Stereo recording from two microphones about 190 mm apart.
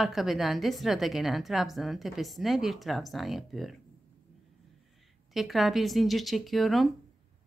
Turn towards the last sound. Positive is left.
turn(degrees=0)  # may be behind; listen again after turning